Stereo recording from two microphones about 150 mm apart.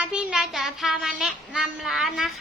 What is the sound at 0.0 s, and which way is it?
Speech, 5° right (ahead or behind).